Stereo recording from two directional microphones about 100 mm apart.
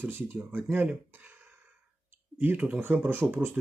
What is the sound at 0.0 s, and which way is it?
Speech, 20° right (ahead or behind).